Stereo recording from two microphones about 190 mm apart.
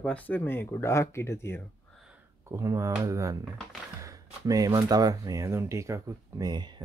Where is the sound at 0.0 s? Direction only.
5° left (ahead or behind).